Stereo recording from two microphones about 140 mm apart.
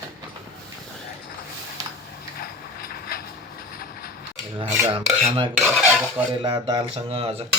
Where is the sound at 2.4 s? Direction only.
90° left.